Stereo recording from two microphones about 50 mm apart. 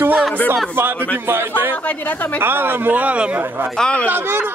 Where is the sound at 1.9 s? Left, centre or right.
Left.